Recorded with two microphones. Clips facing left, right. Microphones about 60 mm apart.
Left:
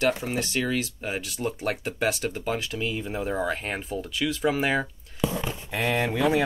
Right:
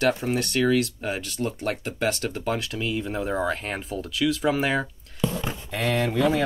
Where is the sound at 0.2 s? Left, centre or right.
Centre.